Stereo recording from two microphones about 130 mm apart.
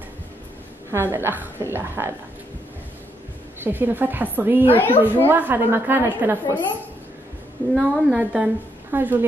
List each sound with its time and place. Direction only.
0.9 s a woman's voice: 20° right (ahead or behind)
3.6 s a woman's voice: 15° right (ahead or behind)
4.7 s a woman's voice: 15° left (ahead or behind)
5.3 s a woman's voice: 15° right (ahead or behind)
7.7 s a woman's voice: centre (ahead or behind)